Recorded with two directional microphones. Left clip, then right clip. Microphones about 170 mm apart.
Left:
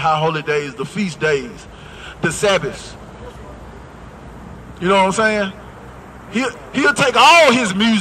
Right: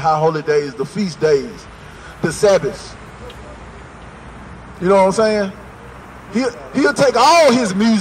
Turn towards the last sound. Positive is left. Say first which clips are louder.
# even
turn(degrees=25)  # may be behind; listen again after turning